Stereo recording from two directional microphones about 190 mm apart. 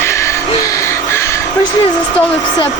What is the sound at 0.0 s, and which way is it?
Music, 15° left (ahead or behind).